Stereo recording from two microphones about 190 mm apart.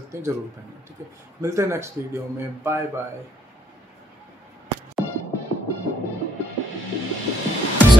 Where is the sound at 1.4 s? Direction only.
15° right (ahead or behind).